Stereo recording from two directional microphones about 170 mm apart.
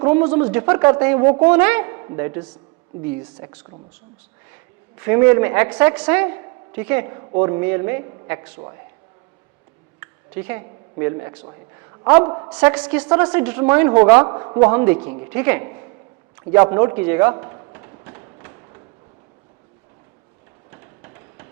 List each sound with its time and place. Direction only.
0.0 s a man's voice: 15° right (ahead or behind)
4.9 s a woman's voice: 15° right (ahead or behind)
10.0 s a sound: 15° right (ahead or behind)
11.0 s a man's voice: 20° right (ahead or behind)
12.5 s a woman's voice: 5° right (ahead or behind)
14.3 s a man's voice: 25° right (ahead or behind)
14.6 s a woman's voice: 10° right (ahead or behind)
14.9 s a man's voice: 25° right (ahead or behind)
15.3 s a woman's voice: 10° right (ahead or behind)
17.3 s a sound: 25° right (ahead or behind)